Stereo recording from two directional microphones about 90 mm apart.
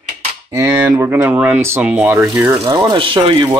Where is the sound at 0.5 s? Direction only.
30° right (ahead or behind).